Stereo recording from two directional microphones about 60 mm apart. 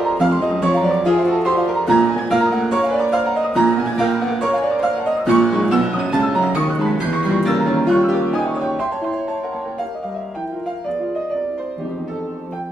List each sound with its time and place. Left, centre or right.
0.0 s music: centre